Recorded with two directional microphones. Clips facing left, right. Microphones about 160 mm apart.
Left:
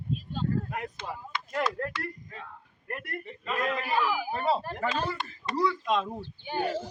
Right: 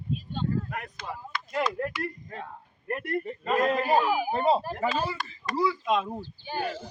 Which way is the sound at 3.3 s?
45° right (ahead or behind).